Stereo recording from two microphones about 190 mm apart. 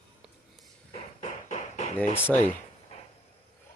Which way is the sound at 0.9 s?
40° left (ahead or behind).